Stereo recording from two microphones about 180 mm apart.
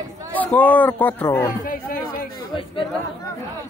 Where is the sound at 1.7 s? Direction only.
55° left (ahead or behind).